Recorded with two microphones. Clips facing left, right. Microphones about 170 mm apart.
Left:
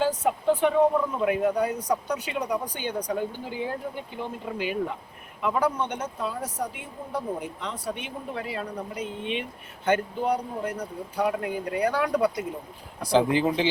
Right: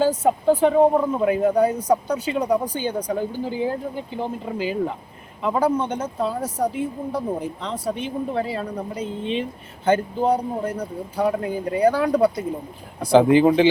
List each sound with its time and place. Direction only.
0.2 s speech: 35° right (ahead or behind)
13.1 s speech: 55° right (ahead or behind)